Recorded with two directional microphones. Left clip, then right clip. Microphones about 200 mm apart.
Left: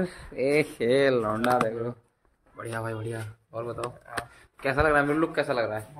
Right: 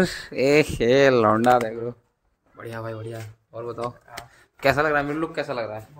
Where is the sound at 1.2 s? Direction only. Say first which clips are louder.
Right 8 dB; 55° right (ahead or behind).